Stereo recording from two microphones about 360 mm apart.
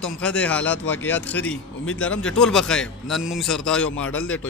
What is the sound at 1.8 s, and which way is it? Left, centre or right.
Speech, left.